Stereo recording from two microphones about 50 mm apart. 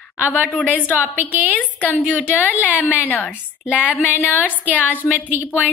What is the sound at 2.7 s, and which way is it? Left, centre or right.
Speech, right.